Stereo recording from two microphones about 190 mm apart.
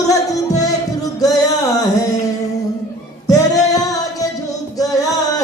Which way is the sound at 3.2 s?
20° left (ahead or behind).